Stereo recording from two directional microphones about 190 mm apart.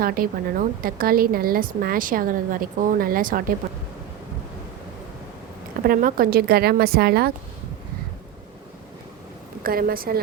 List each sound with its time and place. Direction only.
0.0 s a woman's voice: 50° right (ahead or behind)
5.8 s a woman's voice: 50° right (ahead or behind)
9.6 s a woman's voice: 50° right (ahead or behind)